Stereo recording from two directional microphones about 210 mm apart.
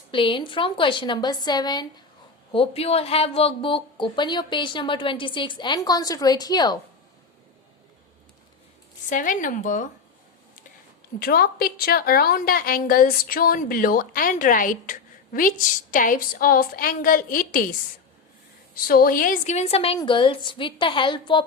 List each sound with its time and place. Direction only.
0.1 s a woman's voice: 25° left (ahead or behind)
9.0 s a woman's voice: 40° left (ahead or behind)
11.2 s a woman's voice: 45° left (ahead or behind); by 21.4 s 25° left (ahead or behind)